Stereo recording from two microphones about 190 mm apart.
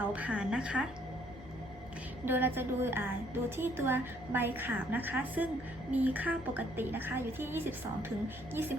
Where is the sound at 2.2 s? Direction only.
10° right (ahead or behind).